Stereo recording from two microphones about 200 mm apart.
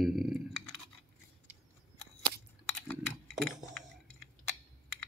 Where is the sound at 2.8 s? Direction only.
5° left (ahead or behind).